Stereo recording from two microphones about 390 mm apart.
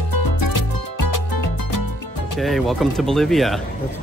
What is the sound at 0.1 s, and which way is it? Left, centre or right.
Music, left.